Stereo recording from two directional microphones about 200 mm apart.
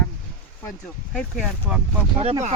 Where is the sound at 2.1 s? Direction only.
30° right (ahead or behind).